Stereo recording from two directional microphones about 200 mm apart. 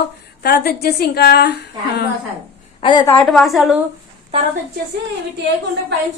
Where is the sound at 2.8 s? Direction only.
20° left (ahead or behind).